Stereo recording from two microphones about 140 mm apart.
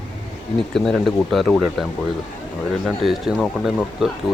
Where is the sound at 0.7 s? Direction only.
5° left (ahead or behind).